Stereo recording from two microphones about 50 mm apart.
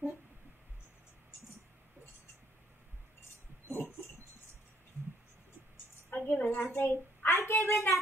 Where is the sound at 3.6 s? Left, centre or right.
Left.